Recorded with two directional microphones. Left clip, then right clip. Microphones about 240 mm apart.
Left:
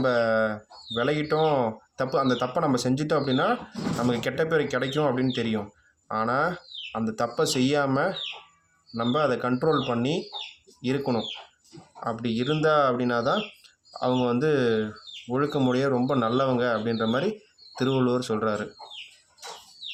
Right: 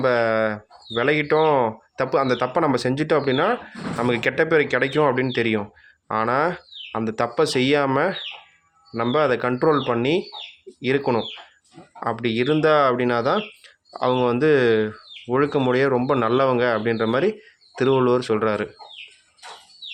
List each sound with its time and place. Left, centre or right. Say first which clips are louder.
0.0 s speech: right 4 dB; right